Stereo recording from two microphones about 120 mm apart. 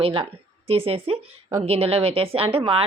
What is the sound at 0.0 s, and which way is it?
A woman's voice, 50° right (ahead or behind).